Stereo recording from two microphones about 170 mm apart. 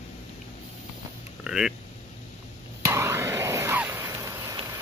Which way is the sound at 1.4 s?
5° right (ahead or behind).